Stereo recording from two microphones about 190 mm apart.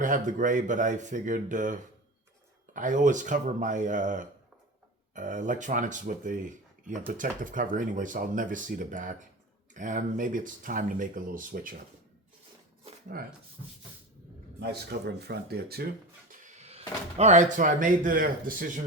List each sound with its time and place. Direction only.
0.0 s speech: 45° right (ahead or behind)
13.1 s speech: 50° right (ahead or behind)
14.6 s speech: 60° right (ahead or behind)
16.3 s speech: 35° right (ahead or behind)